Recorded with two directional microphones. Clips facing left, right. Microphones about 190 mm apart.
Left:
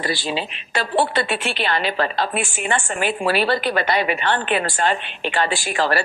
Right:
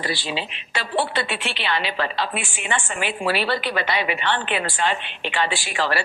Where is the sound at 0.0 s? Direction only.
45° left (ahead or behind).